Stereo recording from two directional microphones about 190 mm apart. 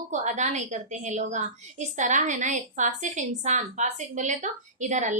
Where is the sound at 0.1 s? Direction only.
40° right (ahead or behind).